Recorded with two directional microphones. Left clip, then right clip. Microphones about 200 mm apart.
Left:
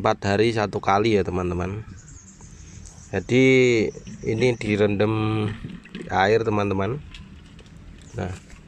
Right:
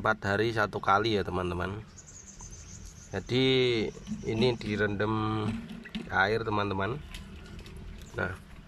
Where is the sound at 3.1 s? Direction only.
10° left (ahead or behind).